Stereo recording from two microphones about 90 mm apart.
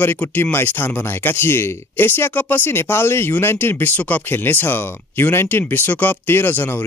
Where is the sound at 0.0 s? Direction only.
20° left (ahead or behind).